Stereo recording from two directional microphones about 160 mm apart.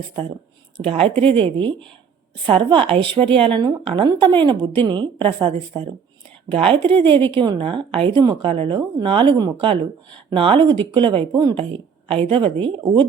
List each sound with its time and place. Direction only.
0.8 s a woman's voice: 35° right (ahead or behind)
6.8 s a woman's voice: 10° left (ahead or behind)
7.1 s a woman's voice: 30° right (ahead or behind)